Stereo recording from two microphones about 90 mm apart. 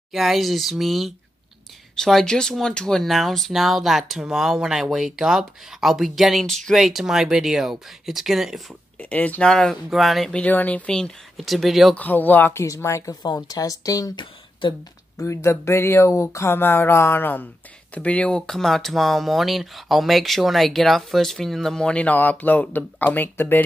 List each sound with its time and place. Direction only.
0.1 s speech: centre (ahead or behind)
8.9 s speech: 20° left (ahead or behind); by 10.3 s centre (ahead or behind)
10.3 s speech: 15° left (ahead or behind); by 11.9 s centre (ahead or behind)
11.9 s speech: 20° left (ahead or behind)
12.6 s speech: 35° left (ahead or behind)
14.1 s speech: 60° left (ahead or behind)
15.1 s speech: 30° left (ahead or behind)